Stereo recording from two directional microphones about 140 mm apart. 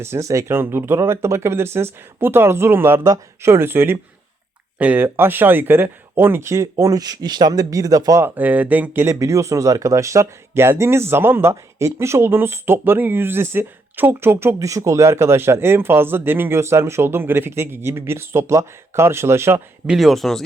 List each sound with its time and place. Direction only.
0.0 s speech: 20° right (ahead or behind)
8.4 s speech: 10° right (ahead or behind)
19.9 s speech: centre (ahead or behind)